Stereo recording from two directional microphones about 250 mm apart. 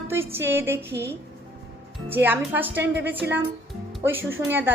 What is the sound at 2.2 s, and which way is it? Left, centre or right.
A woman's voice, centre.